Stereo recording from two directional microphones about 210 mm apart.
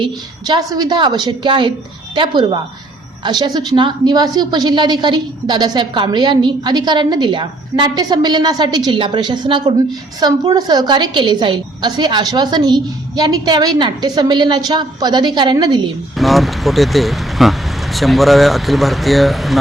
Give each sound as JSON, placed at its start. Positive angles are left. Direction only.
{"t": 0.0, "sound": "a woman's voice", "side_deg": -20}
{"t": 16.1, "sound": "speech", "side_deg": 0}